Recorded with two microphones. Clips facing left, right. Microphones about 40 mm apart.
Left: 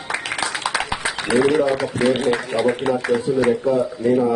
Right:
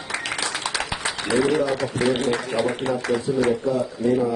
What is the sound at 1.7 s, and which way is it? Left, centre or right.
A man's voice, centre.